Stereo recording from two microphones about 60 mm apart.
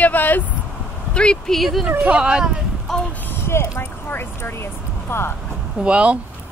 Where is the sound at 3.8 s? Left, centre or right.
Left.